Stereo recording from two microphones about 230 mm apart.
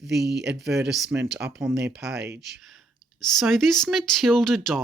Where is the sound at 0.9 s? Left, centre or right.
Centre.